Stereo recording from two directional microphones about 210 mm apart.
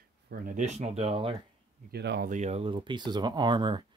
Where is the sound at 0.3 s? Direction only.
35° right (ahead or behind).